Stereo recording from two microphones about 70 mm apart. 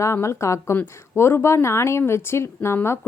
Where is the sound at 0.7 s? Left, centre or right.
Left.